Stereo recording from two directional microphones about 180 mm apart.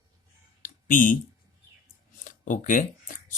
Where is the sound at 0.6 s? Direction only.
45° left (ahead or behind).